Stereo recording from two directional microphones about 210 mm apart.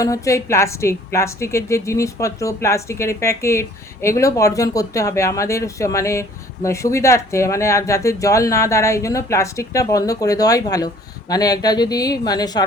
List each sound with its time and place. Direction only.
0.0 s a woman's voice: 15° left (ahead or behind)